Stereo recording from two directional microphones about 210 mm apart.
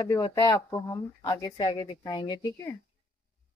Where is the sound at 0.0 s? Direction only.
15° left (ahead or behind).